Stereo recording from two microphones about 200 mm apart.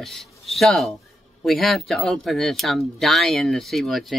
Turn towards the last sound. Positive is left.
turn(degrees=0)  # may be behind; listen again after turning